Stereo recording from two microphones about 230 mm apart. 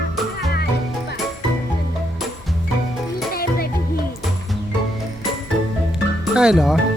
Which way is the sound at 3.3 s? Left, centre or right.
Left.